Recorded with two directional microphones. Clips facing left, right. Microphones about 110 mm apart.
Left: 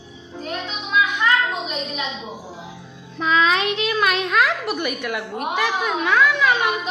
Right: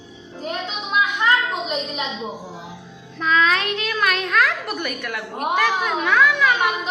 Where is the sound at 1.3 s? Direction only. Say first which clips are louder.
Right 1 dB; 20° right (ahead or behind).